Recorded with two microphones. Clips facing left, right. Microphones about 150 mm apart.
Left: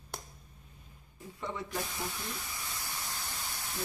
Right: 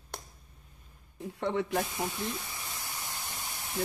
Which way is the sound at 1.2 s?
70° right (ahead or behind).